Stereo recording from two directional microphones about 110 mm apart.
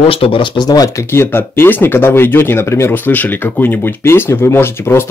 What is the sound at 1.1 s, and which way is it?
Speech, 20° left (ahead or behind).